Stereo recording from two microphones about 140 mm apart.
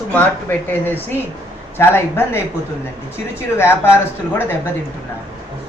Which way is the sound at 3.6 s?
15° left (ahead or behind).